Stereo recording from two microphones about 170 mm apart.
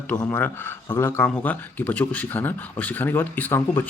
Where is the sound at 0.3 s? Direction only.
10° left (ahead or behind).